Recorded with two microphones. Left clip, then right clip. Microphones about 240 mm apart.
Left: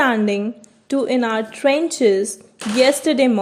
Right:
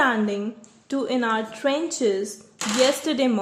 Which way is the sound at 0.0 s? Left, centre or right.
Left.